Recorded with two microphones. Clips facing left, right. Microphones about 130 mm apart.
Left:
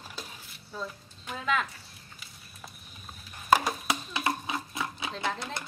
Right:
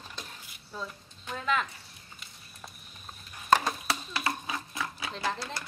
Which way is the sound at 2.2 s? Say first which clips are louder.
Even; centre (ahead or behind).